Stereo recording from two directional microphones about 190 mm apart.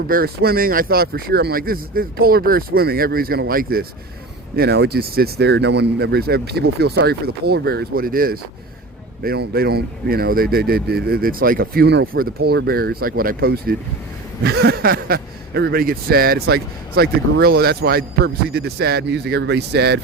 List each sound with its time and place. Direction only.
0.1 s speech: 50° right (ahead or behind)